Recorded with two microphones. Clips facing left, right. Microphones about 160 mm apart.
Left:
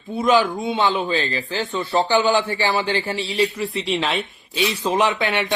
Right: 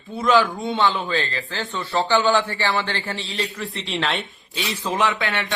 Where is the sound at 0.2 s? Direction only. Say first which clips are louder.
Left 1 dB; 20° left (ahead or behind); by 4.2 s centre (ahead or behind).